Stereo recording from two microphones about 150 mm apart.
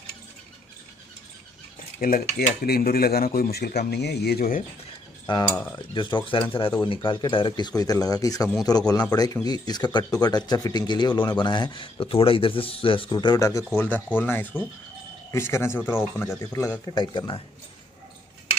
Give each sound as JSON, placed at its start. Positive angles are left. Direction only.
{"t": 2.0, "sound": "speech", "side_deg": 70}
{"t": 5.9, "sound": "speech", "side_deg": 35}